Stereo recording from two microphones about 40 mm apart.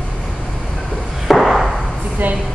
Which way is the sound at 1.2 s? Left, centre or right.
Centre.